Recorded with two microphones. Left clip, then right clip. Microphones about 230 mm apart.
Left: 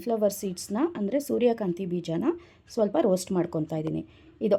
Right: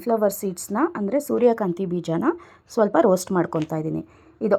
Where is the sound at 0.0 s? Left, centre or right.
Centre.